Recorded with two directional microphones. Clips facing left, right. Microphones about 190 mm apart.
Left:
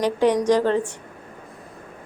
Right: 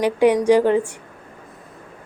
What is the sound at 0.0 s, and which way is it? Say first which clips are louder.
Speech: right 3 dB; 10° right (ahead or behind).